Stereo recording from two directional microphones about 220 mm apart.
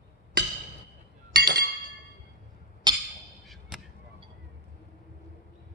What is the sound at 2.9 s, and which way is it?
Wood block, 20° right (ahead or behind).